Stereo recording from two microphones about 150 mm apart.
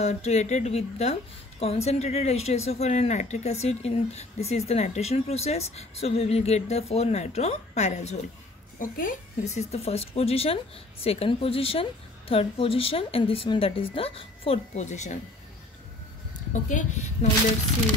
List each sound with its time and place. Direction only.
0.0 s a woman's voice: 50° left (ahead or behind)
8.7 s a woman's voice: 65° left (ahead or behind)
16.5 s a woman's voice: 55° left (ahead or behind)